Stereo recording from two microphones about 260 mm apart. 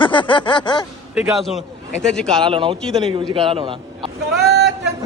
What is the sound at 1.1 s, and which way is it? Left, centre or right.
Speech, centre.